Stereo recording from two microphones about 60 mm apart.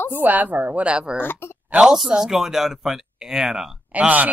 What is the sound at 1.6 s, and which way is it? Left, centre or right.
Speech, centre.